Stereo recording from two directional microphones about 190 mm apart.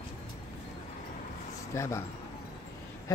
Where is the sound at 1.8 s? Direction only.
15° left (ahead or behind).